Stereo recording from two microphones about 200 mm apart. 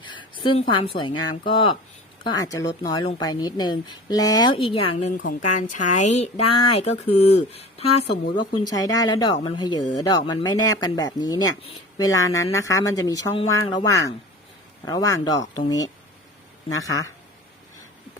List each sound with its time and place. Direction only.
0.0 s a sound: 25° left (ahead or behind)
0.7 s speech: 25° left (ahead or behind)
8.4 s speech: 20° left (ahead or behind)